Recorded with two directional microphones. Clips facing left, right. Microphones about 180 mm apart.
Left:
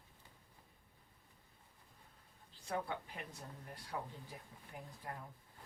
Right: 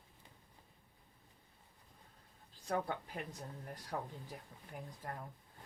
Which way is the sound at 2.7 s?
50° right (ahead or behind).